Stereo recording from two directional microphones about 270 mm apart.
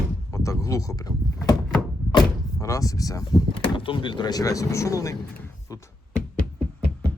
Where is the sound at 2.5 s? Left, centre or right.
Centre.